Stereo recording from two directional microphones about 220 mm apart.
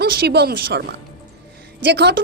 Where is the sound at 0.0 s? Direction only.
50° right (ahead or behind).